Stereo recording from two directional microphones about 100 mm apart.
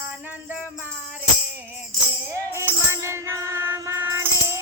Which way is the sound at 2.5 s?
25° right (ahead or behind).